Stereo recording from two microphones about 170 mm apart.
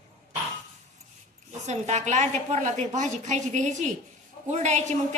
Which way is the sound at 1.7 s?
45° right (ahead or behind).